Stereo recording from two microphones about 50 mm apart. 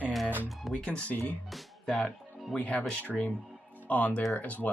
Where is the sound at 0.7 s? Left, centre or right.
Left.